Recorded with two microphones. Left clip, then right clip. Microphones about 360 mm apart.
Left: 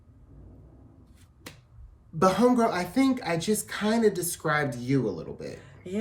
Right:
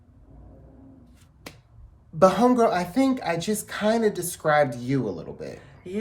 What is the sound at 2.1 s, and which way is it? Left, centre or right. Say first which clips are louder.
Speech: right 4 dB; centre.